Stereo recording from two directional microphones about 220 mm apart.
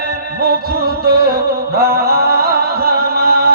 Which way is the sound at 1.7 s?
45° right (ahead or behind).